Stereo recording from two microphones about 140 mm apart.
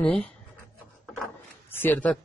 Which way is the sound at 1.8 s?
10° left (ahead or behind).